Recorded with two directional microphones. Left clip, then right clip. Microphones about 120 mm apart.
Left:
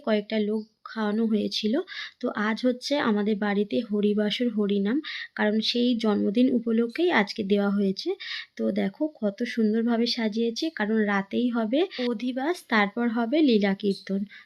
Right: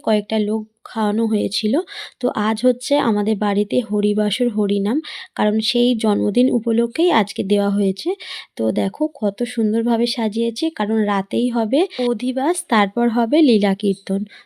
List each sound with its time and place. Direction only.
0.0 s speech: 50° right (ahead or behind)